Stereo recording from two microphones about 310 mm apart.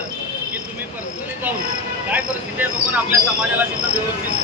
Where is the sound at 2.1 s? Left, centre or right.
Centre.